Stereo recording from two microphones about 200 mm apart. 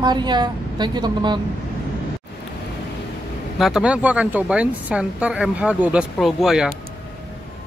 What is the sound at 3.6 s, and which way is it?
Speech, centre (ahead or behind).